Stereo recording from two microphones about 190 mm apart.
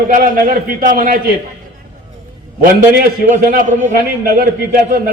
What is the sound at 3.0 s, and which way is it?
A man's voice, 45° right (ahead or behind).